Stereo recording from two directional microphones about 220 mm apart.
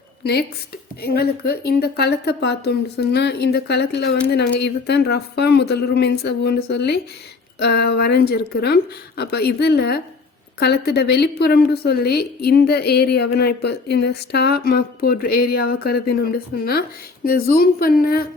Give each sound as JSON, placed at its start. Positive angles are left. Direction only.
{"t": 1.0, "sound": "a woman's voice", "side_deg": 45}